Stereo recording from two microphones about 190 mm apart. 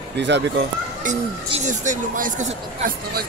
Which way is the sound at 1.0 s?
40° right (ahead or behind).